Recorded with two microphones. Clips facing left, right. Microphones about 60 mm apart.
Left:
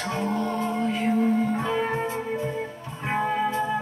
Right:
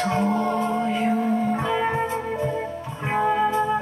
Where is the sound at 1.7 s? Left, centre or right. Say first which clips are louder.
Right 3 dB; centre.